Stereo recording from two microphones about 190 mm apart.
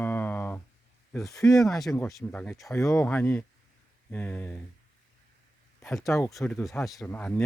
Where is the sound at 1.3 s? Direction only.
15° left (ahead or behind).